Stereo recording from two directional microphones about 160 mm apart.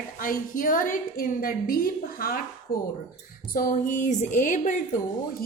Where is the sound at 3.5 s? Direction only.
55° left (ahead or behind).